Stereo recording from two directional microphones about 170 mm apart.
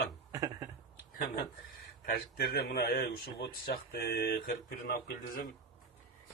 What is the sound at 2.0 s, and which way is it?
A man's voice, 65° left (ahead or behind).